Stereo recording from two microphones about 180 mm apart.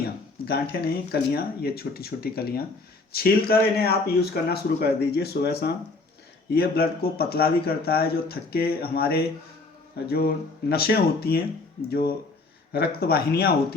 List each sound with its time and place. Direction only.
0.4 s speech: 60° left (ahead or behind)